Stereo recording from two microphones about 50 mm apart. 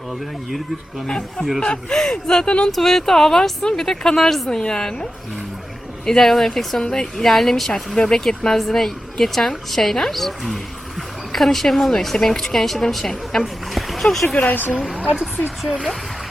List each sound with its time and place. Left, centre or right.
1.0 s speech: centre
2.7 s speech: centre
4.4 s speech: centre
6.1 s speech: centre
14.3 s speech: left
14.9 s speech: right